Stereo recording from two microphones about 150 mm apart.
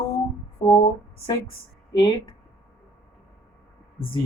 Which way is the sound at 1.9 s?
25° left (ahead or behind).